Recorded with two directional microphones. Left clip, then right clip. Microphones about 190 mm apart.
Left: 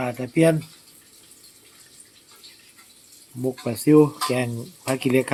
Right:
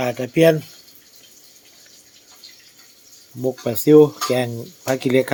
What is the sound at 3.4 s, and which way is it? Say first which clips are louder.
Speech: right 4 dB; 10° right (ahead or behind).